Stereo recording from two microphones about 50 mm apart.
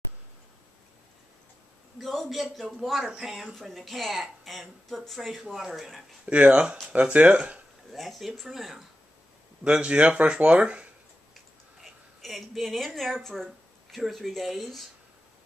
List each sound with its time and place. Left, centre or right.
2.0 s speech: centre
6.2 s speech: right
7.9 s speech: centre
9.7 s speech: right
11.8 s speech: centre